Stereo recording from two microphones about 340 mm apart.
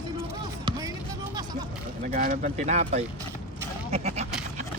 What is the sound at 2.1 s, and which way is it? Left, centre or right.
Speech, right.